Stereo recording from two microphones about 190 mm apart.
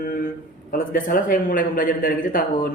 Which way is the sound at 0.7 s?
45° left (ahead or behind).